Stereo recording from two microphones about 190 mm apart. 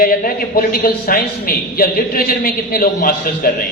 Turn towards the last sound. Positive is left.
turn(degrees=50)  # may be behind; listen again after turning